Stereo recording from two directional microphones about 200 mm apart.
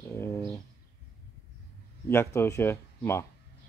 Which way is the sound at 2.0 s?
15° left (ahead or behind).